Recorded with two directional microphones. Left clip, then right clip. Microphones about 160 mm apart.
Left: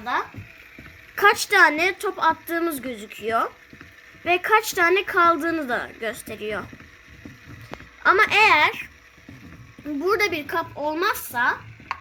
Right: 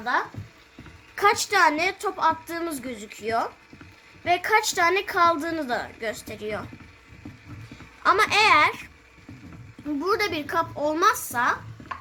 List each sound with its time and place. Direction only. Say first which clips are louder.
1.1 s speech: left 3 dB; 25° left (ahead or behind)
1.7 s speech: left 2 dB; 10° left (ahead or behind)
8.0 s speech: left 3 dB; centre (ahead or behind)
10.1 s speech: left 3 dB; 5° left (ahead or behind)
10.4 s a woman's voice: right 1 dB; 10° right (ahead or behind)